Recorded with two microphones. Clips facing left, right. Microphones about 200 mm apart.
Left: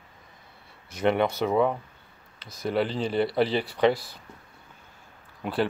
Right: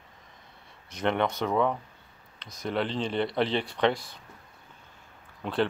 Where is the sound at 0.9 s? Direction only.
5° left (ahead or behind).